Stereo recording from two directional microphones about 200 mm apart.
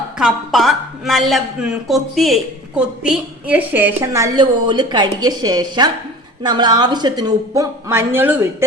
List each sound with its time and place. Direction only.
0.2 s a woman's voice: centre (ahead or behind)